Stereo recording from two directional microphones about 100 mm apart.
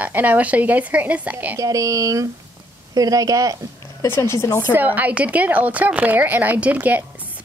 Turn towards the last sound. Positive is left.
turn(degrees=-15)  # may be behind; listen again after turning